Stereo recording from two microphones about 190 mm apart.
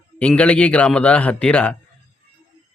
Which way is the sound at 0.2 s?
5° left (ahead or behind).